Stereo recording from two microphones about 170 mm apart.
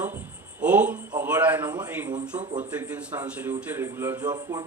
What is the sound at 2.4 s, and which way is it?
Speech, 45° right (ahead or behind).